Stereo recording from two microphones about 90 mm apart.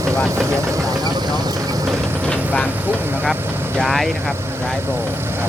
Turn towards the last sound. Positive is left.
turn(degrees=5)  # may be behind; listen again after turning